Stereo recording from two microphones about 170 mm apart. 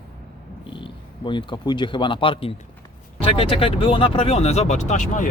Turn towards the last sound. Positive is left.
turn(degrees=50)  # may be behind; listen again after turning